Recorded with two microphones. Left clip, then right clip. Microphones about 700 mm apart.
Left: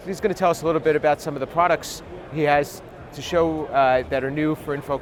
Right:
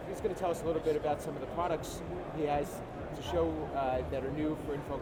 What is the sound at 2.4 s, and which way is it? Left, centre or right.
A man's voice, left.